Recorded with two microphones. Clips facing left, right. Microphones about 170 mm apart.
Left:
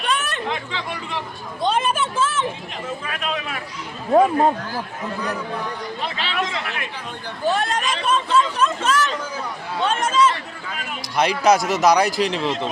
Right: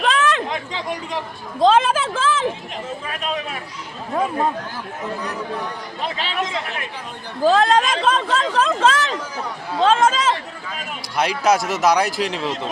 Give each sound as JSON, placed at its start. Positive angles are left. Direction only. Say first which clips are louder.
{"t": 0.0, "sound": "chatter", "louder": "right 6 dB", "side_deg": -90}
{"t": 0.7, "sound": "speech", "louder": "right 2 dB", "side_deg": -40}
{"t": 1.5, "sound": "speech", "louder": "right 6 dB", "side_deg": -90}
{"t": 3.1, "sound": "speech", "louder": "right 2 dB", "side_deg": -35}
{"t": 6.1, "sound": "speech", "louder": "right 1 dB", "side_deg": -40}
{"t": 7.4, "sound": "speech", "louder": "right 6 dB", "side_deg": -90}
{"t": 11.2, "sound": "a man's voice", "louder": "left 1 dB", "side_deg": -5}